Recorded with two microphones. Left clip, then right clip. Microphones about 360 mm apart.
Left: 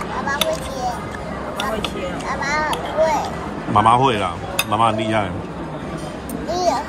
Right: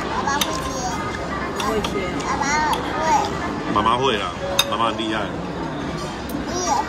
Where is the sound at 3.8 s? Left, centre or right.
Centre.